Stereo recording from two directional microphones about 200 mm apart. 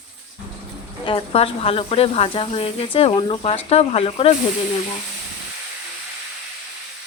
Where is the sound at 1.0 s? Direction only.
25° left (ahead or behind).